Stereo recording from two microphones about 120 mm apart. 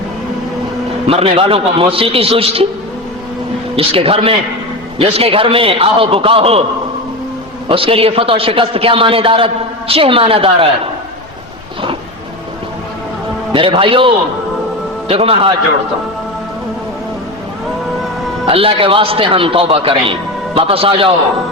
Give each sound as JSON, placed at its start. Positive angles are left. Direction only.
{"t": 1.0, "sound": "a man's voice", "side_deg": -50}
{"t": 3.8, "sound": "a man's voice", "side_deg": -50}
{"t": 7.7, "sound": "a man's voice", "side_deg": -50}
{"t": 13.5, "sound": "a man's voice", "side_deg": -45}
{"t": 18.4, "sound": "a man's voice", "side_deg": -50}